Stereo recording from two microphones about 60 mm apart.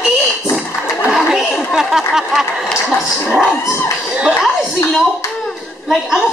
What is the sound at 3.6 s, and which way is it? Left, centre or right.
Speech, left.